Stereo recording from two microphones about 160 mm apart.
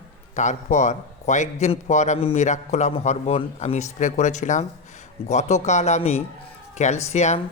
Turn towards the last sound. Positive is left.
turn(degrees=45)  # may be behind; listen again after turning